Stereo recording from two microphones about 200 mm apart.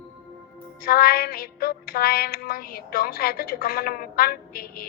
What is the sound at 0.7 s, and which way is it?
Music, 50° left (ahead or behind).